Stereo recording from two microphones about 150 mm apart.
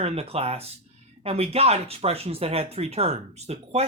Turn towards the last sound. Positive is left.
turn(degrees=-45)  # may be behind; listen again after turning